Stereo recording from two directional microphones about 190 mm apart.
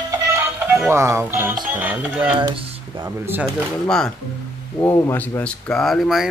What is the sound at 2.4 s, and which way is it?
Speech, 25° right (ahead or behind).